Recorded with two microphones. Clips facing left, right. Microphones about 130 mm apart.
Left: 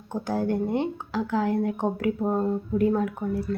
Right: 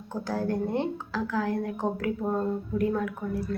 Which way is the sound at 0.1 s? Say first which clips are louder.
Left 3 dB; 20° left (ahead or behind).